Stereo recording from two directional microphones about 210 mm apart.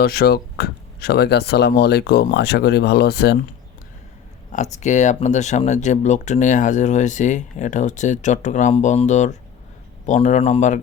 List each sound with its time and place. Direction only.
0.0 s speech: 45° left (ahead or behind)
4.5 s speech: 35° left (ahead or behind)